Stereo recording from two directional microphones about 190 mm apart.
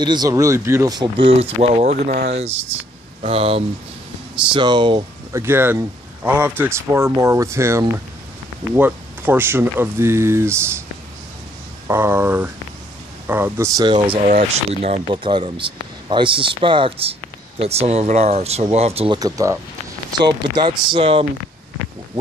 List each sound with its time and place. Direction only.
0.0 s speech: 20° right (ahead or behind); by 2.2 s 40° right (ahead or behind)
3.2 s speech: 30° right (ahead or behind)
5.4 s speech: 10° right (ahead or behind)
11.9 s speech: 10° right (ahead or behind)
14.2 s speech: 40° right (ahead or behind)
19.1 s speech: 20° right (ahead or behind)